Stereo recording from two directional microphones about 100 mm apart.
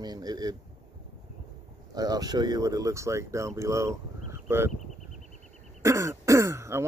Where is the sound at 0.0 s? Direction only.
45° right (ahead or behind).